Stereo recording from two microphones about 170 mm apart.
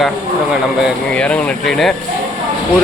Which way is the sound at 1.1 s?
5° left (ahead or behind).